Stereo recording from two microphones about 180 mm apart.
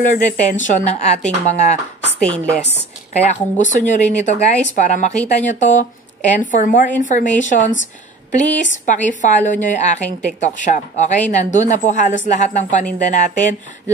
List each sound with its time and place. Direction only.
0.1 s a woman's voice: 45° left (ahead or behind)
2.1 s speech: 5° left (ahead or behind)
3.3 s a woman's voice: 45° left (ahead or behind)